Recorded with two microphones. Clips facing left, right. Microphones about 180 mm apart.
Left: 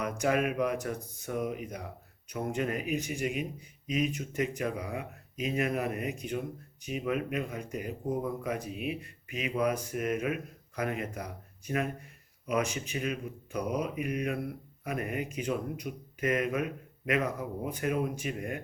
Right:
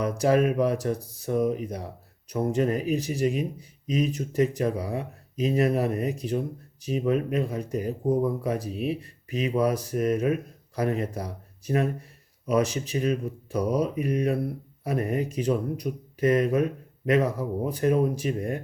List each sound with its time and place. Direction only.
0.0 s speech: 35° right (ahead or behind)